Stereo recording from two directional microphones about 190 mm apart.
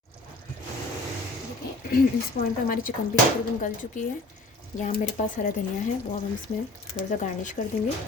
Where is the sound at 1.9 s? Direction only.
50° left (ahead or behind).